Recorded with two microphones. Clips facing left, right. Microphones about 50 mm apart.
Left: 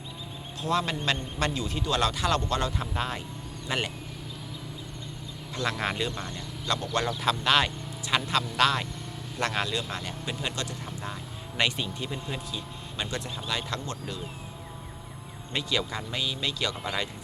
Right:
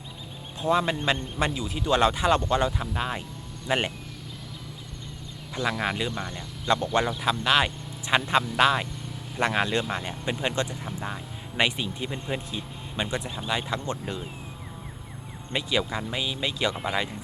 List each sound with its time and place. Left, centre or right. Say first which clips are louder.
0.6 s speech: right 4 dB; centre
1.8 s speech: right 6 dB; right
2.7 s speech: right 2 dB; centre
3.7 s speech: right 5 dB; right
5.5 s speech: right 2 dB; centre
6.7 s speech: right 5 dB; centre
7.2 s speech: left 2 dB; centre
8.0 s speech: right 4 dB; right
15.5 s speech: right 3 dB; centre